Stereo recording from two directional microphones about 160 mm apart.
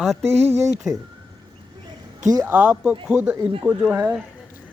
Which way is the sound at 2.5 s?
10° right (ahead or behind).